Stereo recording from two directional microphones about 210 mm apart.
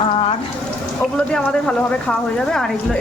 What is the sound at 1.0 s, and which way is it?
Speech, 5° left (ahead or behind).